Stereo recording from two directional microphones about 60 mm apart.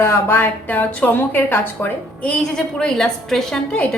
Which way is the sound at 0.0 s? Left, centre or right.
Left.